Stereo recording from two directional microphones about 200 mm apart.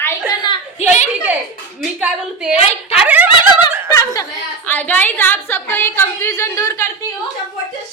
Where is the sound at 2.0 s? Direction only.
5° right (ahead or behind).